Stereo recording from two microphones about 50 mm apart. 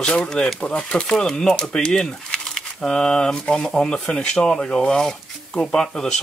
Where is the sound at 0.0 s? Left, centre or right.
Centre.